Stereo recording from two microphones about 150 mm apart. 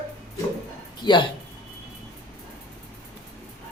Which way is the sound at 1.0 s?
30° left (ahead or behind).